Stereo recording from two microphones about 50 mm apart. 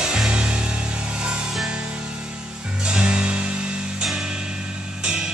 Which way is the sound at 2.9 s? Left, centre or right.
Centre.